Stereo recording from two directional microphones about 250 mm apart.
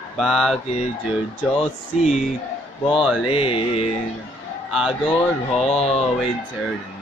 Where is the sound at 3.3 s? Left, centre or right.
Left.